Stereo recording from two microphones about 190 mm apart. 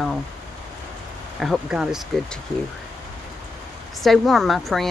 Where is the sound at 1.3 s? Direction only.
Centre (ahead or behind).